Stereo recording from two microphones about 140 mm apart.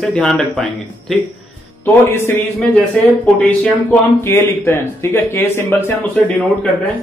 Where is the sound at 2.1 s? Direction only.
15° left (ahead or behind).